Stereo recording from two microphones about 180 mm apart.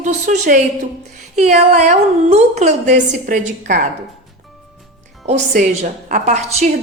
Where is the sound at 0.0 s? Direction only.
45° right (ahead or behind).